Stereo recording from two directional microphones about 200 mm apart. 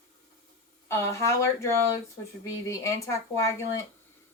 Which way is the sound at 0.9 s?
15° left (ahead or behind).